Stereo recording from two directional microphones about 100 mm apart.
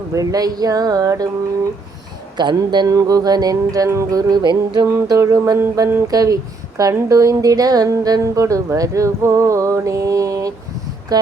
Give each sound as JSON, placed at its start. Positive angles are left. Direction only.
{"t": 0.1, "sound": "speech", "side_deg": -35}
{"t": 2.3, "sound": "speech", "side_deg": -50}
{"t": 2.8, "sound": "speech", "side_deg": -35}